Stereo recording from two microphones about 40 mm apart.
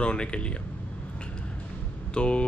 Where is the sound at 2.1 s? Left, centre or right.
Left.